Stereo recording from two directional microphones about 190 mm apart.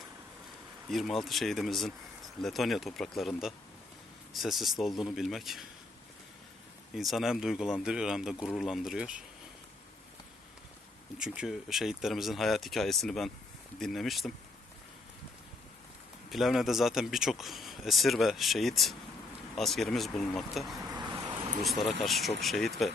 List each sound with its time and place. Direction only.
0.9 s speech: centre (ahead or behind)
6.9 s speech: centre (ahead or behind)
11.2 s speech: 5° right (ahead or behind)
16.3 s speech: centre (ahead or behind)
20.9 s vehicle: 25° right (ahead or behind)
21.6 s speech: centre (ahead or behind)